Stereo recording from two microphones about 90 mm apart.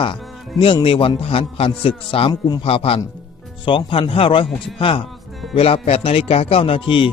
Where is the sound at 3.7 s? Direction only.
75° left (ahead or behind).